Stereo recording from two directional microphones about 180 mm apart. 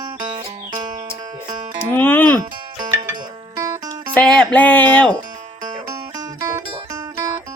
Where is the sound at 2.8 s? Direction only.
20° right (ahead or behind).